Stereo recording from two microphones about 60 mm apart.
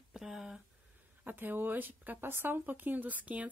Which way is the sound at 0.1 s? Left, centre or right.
Centre.